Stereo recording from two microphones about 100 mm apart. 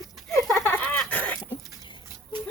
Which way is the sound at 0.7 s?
15° left (ahead or behind).